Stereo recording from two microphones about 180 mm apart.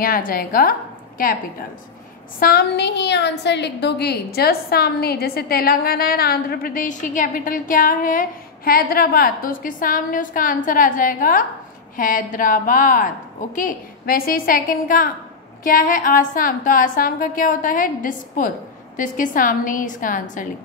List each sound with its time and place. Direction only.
0.0 s a woman's voice: 50° left (ahead or behind)
2.4 s a woman's voice: 65° left (ahead or behind); by 20.4 s 45° left (ahead or behind)